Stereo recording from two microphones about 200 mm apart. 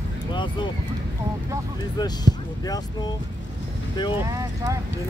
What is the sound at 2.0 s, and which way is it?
Speech, 20° left (ahead or behind).